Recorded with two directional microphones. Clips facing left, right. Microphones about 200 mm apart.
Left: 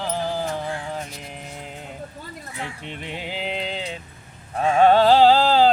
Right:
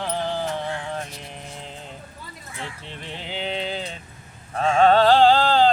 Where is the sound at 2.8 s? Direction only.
15° left (ahead or behind).